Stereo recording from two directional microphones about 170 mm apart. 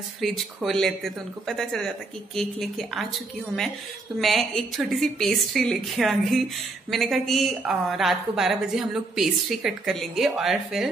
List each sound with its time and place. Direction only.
0.2 s a woman's voice: centre (ahead or behind)
4.2 s a woman's voice: centre (ahead or behind)